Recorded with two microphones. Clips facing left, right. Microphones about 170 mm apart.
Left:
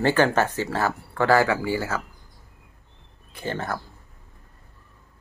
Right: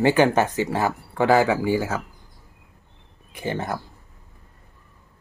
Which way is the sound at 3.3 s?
15° right (ahead or behind).